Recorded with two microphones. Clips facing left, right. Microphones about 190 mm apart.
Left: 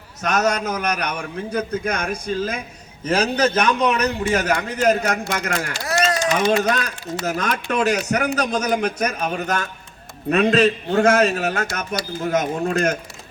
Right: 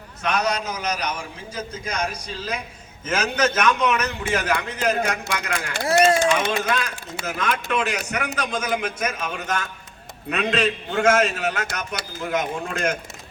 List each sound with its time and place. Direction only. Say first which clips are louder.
0.2 s a man's voice: left 3 dB; 45° left (ahead or behind)
3.0 s a man's voice: left 4 dB; 35° left (ahead or behind)
5.8 s a sound: right 5 dB; 25° right (ahead or behind)
6.6 s a man's voice: left 4 dB; 45° left (ahead or behind)